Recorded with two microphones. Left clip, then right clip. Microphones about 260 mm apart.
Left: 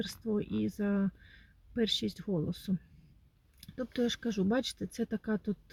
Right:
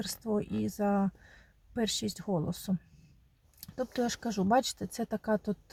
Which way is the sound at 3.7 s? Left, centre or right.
Right.